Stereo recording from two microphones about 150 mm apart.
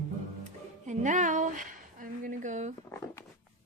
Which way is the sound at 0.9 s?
55° right (ahead or behind).